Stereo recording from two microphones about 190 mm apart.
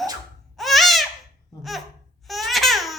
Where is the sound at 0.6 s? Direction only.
Centre (ahead or behind).